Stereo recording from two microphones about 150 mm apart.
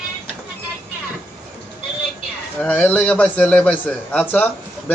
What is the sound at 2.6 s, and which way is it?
A man's voice, 10° left (ahead or behind).